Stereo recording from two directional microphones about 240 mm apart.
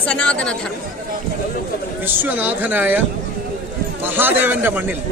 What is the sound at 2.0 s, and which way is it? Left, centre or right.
Speech, centre.